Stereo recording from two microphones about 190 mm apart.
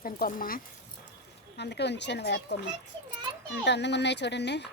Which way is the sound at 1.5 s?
65° left (ahead or behind).